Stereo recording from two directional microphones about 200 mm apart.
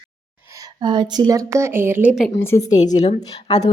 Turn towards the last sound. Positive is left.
turn(degrees=20)  # may be behind; listen again after turning